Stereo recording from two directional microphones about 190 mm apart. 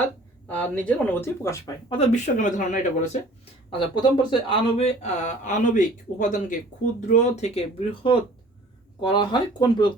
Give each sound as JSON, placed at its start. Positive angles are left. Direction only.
{"t": 0.4, "sound": "speech", "side_deg": 10}
{"t": 1.9, "sound": "speech", "side_deg": 35}
{"t": 3.7, "sound": "speech", "side_deg": 25}
{"t": 9.0, "sound": "speech", "side_deg": 25}